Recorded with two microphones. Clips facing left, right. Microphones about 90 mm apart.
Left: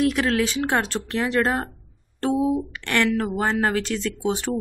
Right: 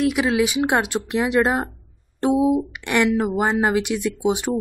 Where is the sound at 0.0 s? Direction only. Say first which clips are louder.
Right 2 dB; 10° right (ahead or behind).